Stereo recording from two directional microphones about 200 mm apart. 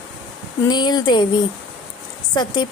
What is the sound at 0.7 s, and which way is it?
Speech, 20° left (ahead or behind).